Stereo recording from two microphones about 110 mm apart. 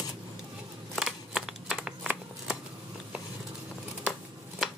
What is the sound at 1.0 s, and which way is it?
Shuffling cards, 5° right (ahead or behind).